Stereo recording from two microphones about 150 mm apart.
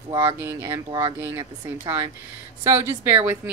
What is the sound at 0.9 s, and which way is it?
Speech, 25° right (ahead or behind).